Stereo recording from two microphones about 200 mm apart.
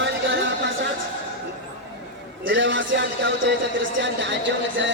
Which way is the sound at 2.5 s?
70° right (ahead or behind).